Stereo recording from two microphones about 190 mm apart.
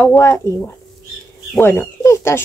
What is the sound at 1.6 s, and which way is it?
Speech, 10° left (ahead or behind).